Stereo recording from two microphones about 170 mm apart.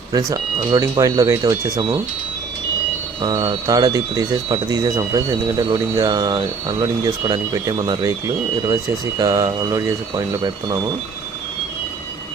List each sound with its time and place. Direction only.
0.1 s speech: 20° right (ahead or behind)
3.2 s speech: 25° right (ahead or behind)